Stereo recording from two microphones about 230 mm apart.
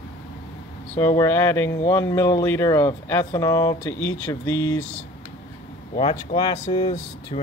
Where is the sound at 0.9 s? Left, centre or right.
Centre.